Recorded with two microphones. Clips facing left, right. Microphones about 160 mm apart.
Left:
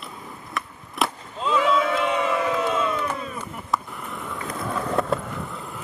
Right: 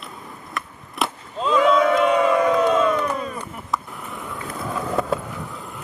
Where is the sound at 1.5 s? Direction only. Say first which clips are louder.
Right 5 dB; 45° right (ahead or behind).